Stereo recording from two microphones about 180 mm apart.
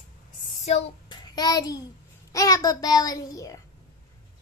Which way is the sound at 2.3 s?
20° left (ahead or behind).